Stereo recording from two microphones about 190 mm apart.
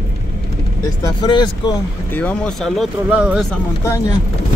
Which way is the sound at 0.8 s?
20° left (ahead or behind).